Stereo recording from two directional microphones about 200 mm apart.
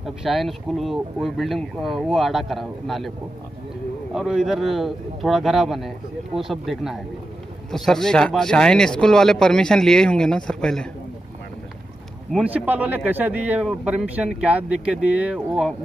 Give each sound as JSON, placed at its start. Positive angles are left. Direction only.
{"t": 0.0, "sound": "speech", "side_deg": 0}
{"t": 4.1, "sound": "speech", "side_deg": 0}
{"t": 12.3, "sound": "a man's voice", "side_deg": -5}